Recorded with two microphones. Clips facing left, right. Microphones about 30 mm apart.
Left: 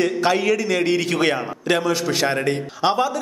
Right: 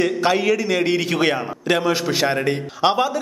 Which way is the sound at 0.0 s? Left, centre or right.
Centre.